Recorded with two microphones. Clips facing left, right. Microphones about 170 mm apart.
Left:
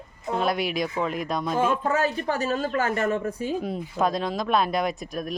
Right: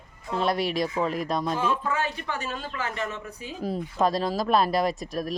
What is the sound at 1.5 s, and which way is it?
A man's voice, 50° left (ahead or behind).